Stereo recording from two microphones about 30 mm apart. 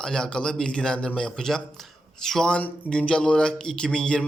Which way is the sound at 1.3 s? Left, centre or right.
Centre.